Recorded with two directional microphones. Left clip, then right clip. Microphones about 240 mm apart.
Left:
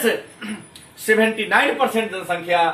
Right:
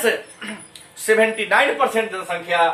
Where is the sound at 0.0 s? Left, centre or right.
Centre.